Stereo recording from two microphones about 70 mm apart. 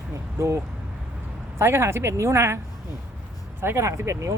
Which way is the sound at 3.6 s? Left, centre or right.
Right.